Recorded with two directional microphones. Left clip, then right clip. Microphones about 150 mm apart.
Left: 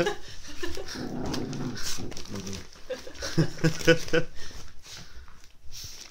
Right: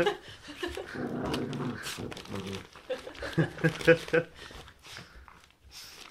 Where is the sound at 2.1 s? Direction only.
10° right (ahead or behind).